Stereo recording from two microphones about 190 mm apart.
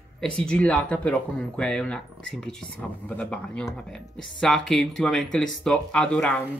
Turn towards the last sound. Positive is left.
turn(degrees=5)  # may be behind; listen again after turning